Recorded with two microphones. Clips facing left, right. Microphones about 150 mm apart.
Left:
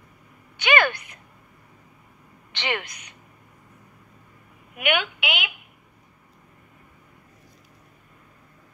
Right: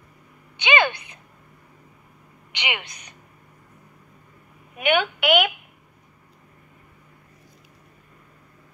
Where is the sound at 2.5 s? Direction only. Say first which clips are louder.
Left 2 dB; 15° right (ahead or behind).